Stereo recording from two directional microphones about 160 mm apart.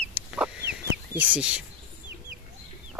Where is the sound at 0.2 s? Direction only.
10° right (ahead or behind).